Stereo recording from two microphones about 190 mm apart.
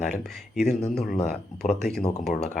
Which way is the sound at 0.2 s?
5° left (ahead or behind).